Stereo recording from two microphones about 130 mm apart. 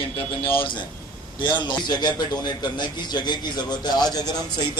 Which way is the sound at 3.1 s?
30° left (ahead or behind).